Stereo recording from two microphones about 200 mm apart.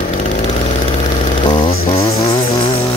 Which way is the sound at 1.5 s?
25° left (ahead or behind).